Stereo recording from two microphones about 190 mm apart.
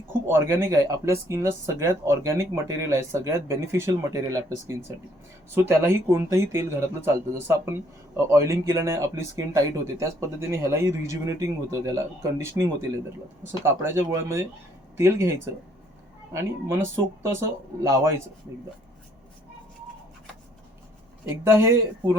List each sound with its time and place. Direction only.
0.1 s speech: 10° right (ahead or behind)
13.7 s speech: 15° right (ahead or behind)
21.4 s speech: 15° right (ahead or behind)